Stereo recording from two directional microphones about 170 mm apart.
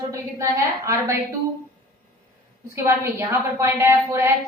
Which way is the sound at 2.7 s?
15° right (ahead or behind).